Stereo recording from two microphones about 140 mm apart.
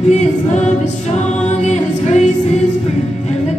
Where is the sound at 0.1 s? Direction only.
55° left (ahead or behind).